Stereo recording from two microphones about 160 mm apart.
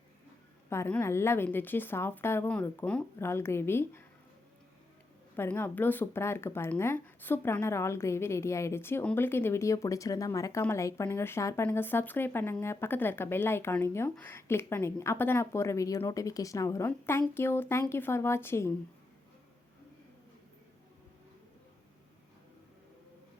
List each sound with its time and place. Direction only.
0.7 s speech: 15° left (ahead or behind)
5.4 s speech: 15° left (ahead or behind)